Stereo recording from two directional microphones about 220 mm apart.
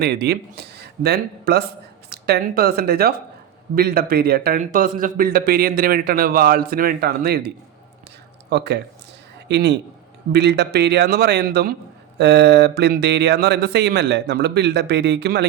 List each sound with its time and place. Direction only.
0.0 s speech: 45° right (ahead or behind)